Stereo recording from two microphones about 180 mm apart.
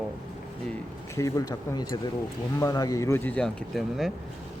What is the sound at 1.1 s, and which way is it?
Speech, 20° left (ahead or behind).